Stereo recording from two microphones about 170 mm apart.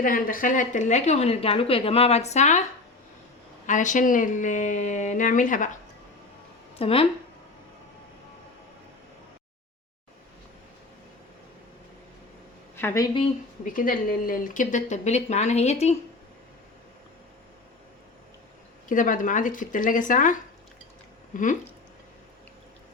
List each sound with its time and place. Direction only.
0.0 s a woman's voice: 55° left (ahead or behind)
3.7 s speech: 50° left (ahead or behind)
6.7 s a woman's voice: 35° left (ahead or behind)
12.7 s speech: 15° left (ahead or behind)
13.7 s speech: 55° left (ahead or behind)
18.9 s speech: 50° left (ahead or behind)